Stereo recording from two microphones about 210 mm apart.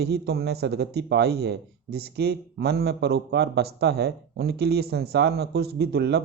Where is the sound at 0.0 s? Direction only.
50° right (ahead or behind).